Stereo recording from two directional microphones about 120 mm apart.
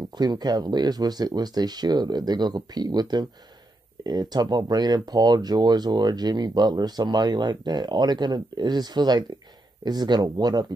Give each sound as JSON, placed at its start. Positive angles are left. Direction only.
{"t": 0.1, "sound": "speech", "side_deg": -35}